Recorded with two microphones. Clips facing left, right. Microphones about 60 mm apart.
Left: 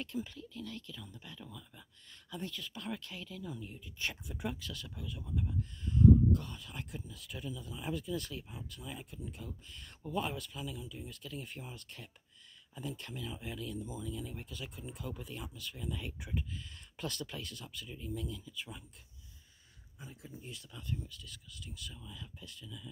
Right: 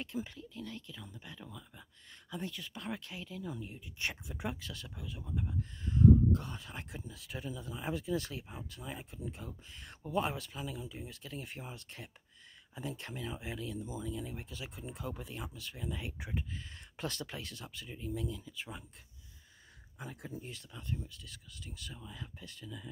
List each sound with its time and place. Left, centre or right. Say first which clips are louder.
0.0 s speech: even; right
15.9 s speech: even; right
20.0 s speech: right 6 dB; right
20.3 s speech: right 2 dB; right